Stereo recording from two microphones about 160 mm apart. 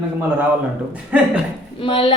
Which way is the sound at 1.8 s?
35° left (ahead or behind).